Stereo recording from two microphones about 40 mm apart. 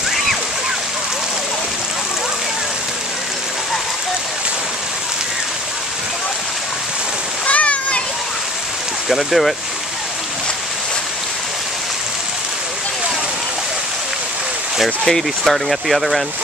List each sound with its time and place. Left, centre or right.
7.4 s splash: left
9.1 s speech: centre
15.0 s speech: centre